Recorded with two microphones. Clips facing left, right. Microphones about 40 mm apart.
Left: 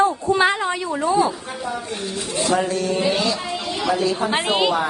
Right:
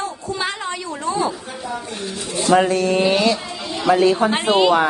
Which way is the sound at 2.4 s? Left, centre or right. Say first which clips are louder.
Right 5 dB; right.